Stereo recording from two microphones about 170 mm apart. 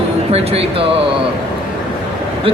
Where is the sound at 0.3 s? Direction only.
35° right (ahead or behind).